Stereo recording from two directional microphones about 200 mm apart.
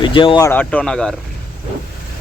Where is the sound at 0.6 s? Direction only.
5° left (ahead or behind).